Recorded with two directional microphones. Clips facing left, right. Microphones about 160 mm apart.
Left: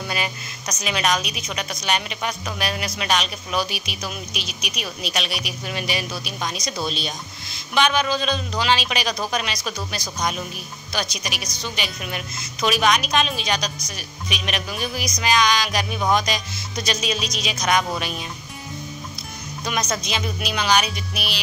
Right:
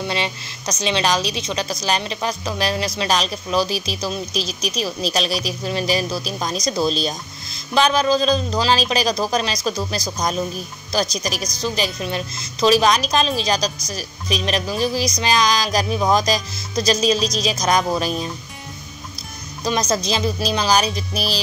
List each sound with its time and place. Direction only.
0.0 s a woman's voice: 25° right (ahead or behind)
19.6 s a woman's voice: 35° right (ahead or behind)